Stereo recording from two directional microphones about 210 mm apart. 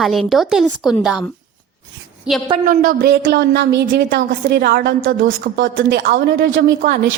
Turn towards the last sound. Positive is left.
turn(degrees=-45)  # may be behind; listen again after turning